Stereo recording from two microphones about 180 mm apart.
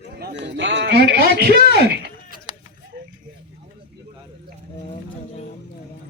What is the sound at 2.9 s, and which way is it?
Vehicle, 65° right (ahead or behind).